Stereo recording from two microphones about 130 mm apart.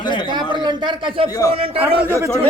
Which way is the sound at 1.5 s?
45° right (ahead or behind).